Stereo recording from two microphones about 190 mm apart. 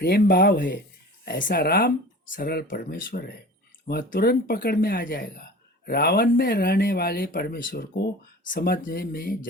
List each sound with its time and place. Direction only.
0.0 s speech: 55° left (ahead or behind)